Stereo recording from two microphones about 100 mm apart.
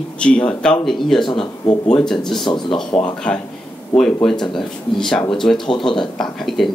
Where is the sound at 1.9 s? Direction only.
5° left (ahead or behind).